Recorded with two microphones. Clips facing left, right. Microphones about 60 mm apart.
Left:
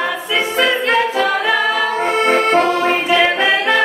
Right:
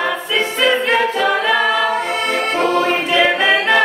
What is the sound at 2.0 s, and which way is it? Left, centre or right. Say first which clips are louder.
Accordion: left 4 dB; left.